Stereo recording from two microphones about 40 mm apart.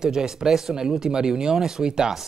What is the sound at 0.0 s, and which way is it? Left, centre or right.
Speech, centre.